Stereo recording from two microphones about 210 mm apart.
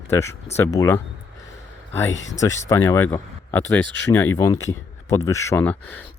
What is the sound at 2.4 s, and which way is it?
Speech, 15° left (ahead or behind).